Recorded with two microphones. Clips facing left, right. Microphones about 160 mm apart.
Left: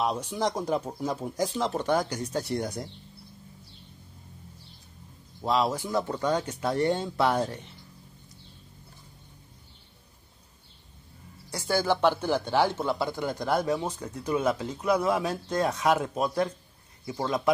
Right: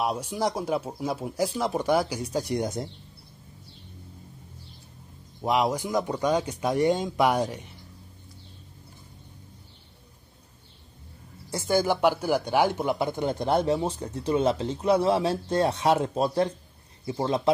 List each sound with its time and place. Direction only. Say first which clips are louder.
0.0 s speech: right 1 dB; 10° right (ahead or behind)
5.4 s speech: right 2 dB; 15° right (ahead or behind)
11.5 s speech: right 2 dB; 20° right (ahead or behind)